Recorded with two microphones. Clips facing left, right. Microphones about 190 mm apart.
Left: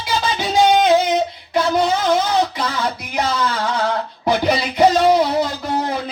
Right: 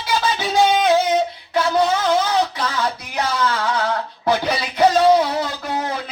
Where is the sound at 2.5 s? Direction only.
15° left (ahead or behind).